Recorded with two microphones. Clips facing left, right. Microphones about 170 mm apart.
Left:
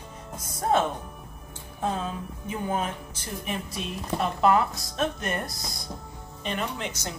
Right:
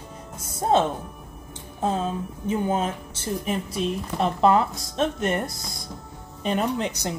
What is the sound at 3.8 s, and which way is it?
Speech, 25° right (ahead or behind).